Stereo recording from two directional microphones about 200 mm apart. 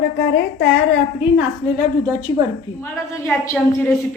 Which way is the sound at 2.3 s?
25° left (ahead or behind).